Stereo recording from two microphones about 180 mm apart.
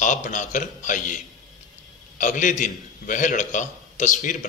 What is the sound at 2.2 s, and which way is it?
A man's voice, 45° left (ahead or behind).